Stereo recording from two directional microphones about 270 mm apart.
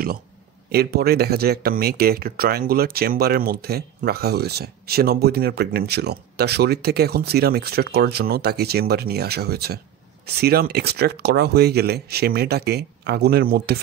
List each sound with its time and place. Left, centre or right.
0.7 s speech: right